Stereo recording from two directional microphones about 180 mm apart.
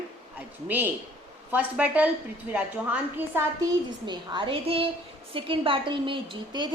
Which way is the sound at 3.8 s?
25° right (ahead or behind).